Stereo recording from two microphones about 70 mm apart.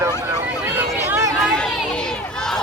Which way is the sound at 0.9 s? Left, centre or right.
Right.